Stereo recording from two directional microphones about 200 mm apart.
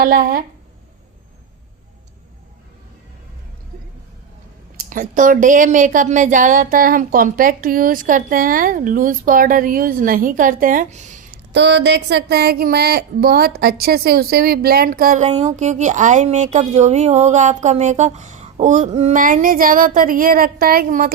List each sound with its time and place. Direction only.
0.0 s speech: 50° right (ahead or behind)
4.8 s speech: 40° right (ahead or behind)
11.5 s speech: 60° right (ahead or behind)